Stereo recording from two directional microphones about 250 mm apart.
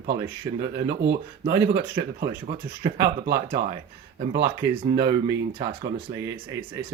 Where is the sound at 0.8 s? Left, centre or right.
Right.